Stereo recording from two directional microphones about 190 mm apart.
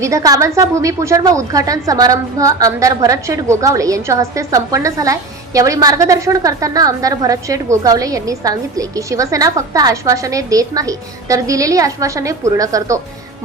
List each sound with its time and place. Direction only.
0.0 s a woman's voice: 15° right (ahead or behind)